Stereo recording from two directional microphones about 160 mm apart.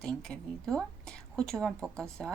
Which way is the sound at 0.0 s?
5° left (ahead or behind).